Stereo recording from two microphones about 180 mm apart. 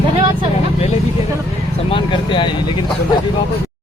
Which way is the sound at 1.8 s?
25° left (ahead or behind).